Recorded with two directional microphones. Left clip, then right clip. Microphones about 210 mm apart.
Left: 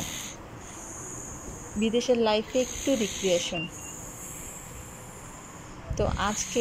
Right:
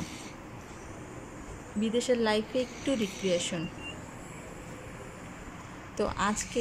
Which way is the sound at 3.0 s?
40° left (ahead or behind).